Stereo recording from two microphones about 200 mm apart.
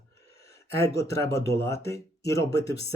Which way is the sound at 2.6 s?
60° left (ahead or behind).